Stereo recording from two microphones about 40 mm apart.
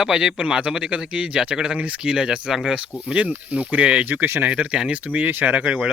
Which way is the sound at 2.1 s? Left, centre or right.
Centre.